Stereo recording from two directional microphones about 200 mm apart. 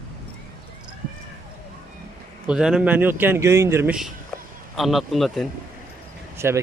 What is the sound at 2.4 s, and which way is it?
Speech, 5° right (ahead or behind).